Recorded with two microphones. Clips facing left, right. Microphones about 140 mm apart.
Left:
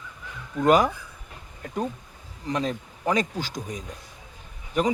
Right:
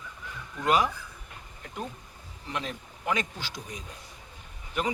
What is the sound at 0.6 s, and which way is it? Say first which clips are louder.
Speech: left 6 dB; 45° left (ahead or behind).